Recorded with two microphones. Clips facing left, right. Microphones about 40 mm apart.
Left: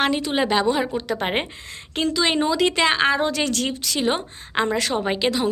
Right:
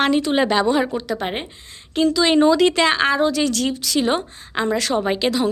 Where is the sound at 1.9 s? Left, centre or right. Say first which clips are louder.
Right 5 dB; left.